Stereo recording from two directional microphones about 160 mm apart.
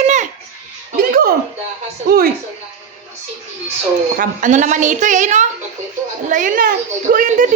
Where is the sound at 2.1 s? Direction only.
60° right (ahead or behind).